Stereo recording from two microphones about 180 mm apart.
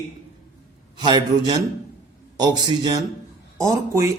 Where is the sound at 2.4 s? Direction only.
25° right (ahead or behind).